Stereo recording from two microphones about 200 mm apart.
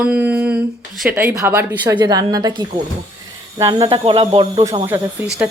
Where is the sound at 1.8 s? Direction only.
20° right (ahead or behind).